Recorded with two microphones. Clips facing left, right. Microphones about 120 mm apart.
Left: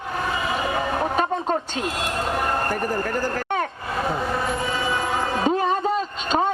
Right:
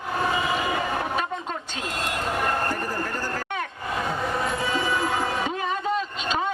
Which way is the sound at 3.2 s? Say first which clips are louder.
Left 5 dB; 40° left (ahead or behind).